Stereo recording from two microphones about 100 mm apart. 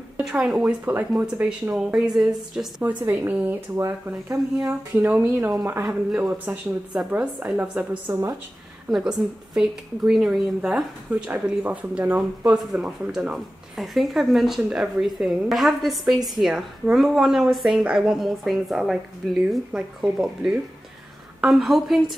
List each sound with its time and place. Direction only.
0.2 s a woman's voice: 5° right (ahead or behind)
2.8 s speech: 15° right (ahead or behind)
4.6 s a woman's voice: 15° right (ahead or behind)
8.1 s speech: 30° right (ahead or behind)
8.9 s a woman's voice: 5° right (ahead or behind)